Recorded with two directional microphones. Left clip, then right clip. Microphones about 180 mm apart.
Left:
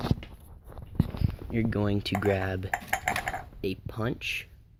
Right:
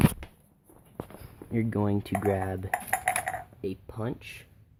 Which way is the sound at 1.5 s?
20° right (ahead or behind).